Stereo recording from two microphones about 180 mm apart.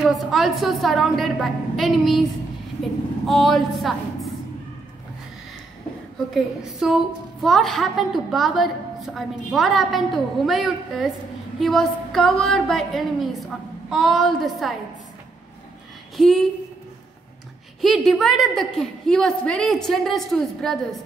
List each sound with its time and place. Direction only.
0.0 s a woman's voice: centre (ahead or behind)
3.3 s a woman's voice: centre (ahead or behind)
6.3 s a woman's voice: centre (ahead or behind)
16.2 s a woman's voice: centre (ahead or behind)
17.8 s a woman's voice: centre (ahead or behind)